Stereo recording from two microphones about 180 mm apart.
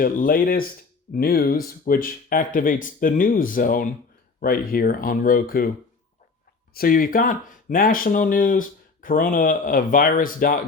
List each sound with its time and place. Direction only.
0.0 s speech: 50° left (ahead or behind)
6.7 s speech: 50° left (ahead or behind)